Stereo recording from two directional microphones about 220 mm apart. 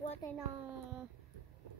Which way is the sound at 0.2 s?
15° left (ahead or behind).